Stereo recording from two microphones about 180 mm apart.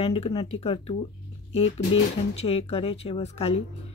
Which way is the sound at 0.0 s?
30° left (ahead or behind).